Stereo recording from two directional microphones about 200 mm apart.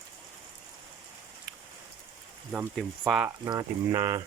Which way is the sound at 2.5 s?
5° right (ahead or behind).